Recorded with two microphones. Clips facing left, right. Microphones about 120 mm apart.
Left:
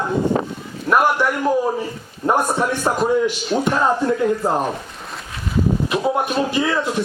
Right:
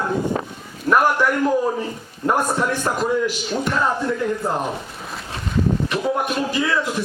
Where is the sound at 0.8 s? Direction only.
10° left (ahead or behind).